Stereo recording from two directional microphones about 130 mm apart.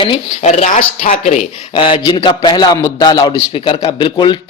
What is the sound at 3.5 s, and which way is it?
Speech, 45° left (ahead or behind).